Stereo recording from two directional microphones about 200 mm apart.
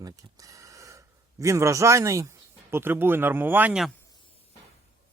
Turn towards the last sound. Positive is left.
turn(degrees=-5)  # may be behind; listen again after turning